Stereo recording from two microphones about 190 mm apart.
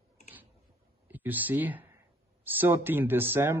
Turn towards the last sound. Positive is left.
turn(degrees=-10)  # may be behind; listen again after turning